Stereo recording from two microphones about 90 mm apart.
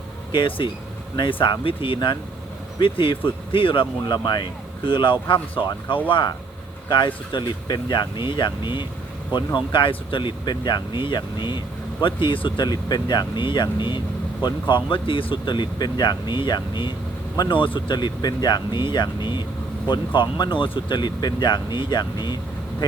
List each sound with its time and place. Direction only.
0.3 s speech: 70° left (ahead or behind)
12.6 s speech: 50° left (ahead or behind)
17.5 s speech: 70° left (ahead or behind)